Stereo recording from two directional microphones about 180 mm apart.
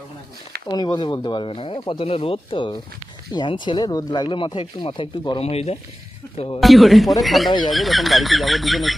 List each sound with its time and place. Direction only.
0.7 s speech: 25° left (ahead or behind)
6.6 s speech: centre (ahead or behind)